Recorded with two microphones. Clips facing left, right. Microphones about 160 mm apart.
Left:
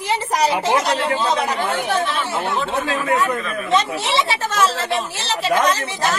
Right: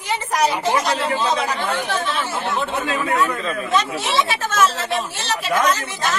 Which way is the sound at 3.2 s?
25° left (ahead or behind).